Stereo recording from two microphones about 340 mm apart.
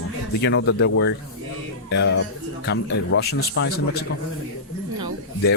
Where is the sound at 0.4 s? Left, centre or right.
Left.